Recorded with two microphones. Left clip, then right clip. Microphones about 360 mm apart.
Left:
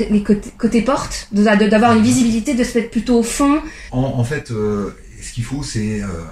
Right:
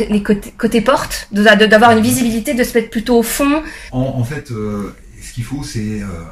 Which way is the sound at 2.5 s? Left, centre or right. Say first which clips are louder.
Right 3 dB; right.